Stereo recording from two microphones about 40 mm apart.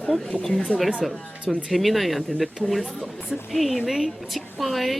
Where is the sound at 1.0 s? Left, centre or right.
Centre.